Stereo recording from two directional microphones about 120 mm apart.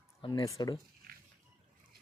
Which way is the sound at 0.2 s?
45° left (ahead or behind).